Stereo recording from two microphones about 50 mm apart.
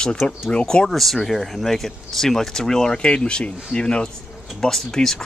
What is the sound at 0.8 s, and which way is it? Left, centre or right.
Speech, centre.